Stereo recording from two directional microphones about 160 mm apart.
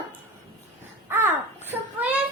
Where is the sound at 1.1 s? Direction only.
15° right (ahead or behind).